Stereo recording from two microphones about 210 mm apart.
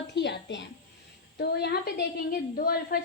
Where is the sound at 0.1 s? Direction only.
55° left (ahead or behind).